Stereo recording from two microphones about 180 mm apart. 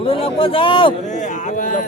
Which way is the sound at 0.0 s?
30° left (ahead or behind).